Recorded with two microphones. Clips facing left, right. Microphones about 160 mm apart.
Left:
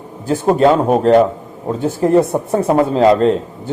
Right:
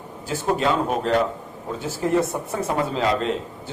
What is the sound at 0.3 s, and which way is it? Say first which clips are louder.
Speech: left 10 dB; 45° left (ahead or behind).